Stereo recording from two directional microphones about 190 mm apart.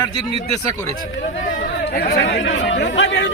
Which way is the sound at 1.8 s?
55° left (ahead or behind).